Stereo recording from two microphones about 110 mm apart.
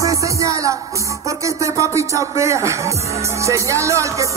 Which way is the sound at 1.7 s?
25° right (ahead or behind).